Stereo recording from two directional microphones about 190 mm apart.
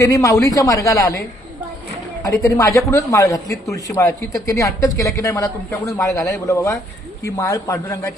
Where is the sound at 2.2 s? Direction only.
15° left (ahead or behind).